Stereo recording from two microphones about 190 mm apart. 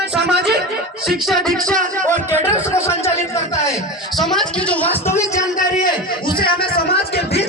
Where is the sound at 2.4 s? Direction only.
15° left (ahead or behind).